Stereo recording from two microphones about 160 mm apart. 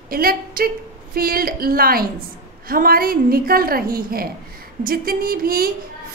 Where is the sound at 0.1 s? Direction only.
65° right (ahead or behind).